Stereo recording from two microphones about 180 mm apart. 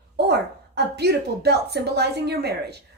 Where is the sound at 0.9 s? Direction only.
65° right (ahead or behind).